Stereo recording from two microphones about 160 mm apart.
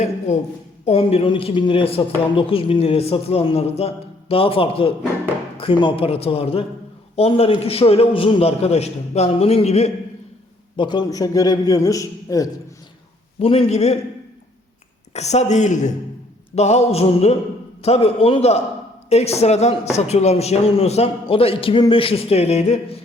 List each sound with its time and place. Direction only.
0.9 s speech: 40° left (ahead or behind)
10.8 s a man's voice: 30° left (ahead or behind)
13.4 s speech: 35° left (ahead or behind)
15.1 s speech: 45° left (ahead or behind)